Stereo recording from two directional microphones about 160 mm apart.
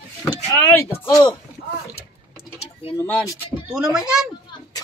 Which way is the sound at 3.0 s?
10° left (ahead or behind).